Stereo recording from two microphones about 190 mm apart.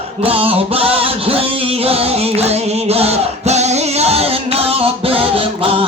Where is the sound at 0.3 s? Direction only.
30° right (ahead or behind).